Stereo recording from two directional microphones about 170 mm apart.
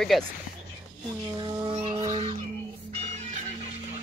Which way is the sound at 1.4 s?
25° right (ahead or behind).